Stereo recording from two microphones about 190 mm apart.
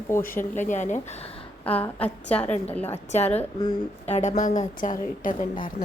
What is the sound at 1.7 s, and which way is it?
A woman's voice, 10° left (ahead or behind).